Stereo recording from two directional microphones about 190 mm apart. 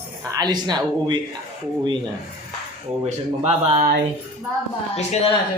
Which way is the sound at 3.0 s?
35° right (ahead or behind).